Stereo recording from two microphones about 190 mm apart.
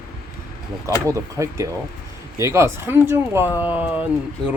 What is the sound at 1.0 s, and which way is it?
Speech, 15° right (ahead or behind).